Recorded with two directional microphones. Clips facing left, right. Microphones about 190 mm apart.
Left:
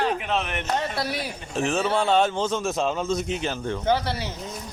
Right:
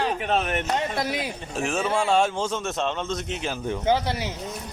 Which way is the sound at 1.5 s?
5° right (ahead or behind).